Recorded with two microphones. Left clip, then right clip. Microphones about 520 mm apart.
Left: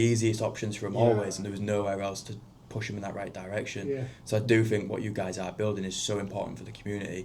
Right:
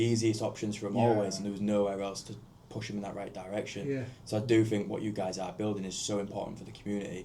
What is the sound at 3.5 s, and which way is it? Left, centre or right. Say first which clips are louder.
Speech: left 2 dB; left.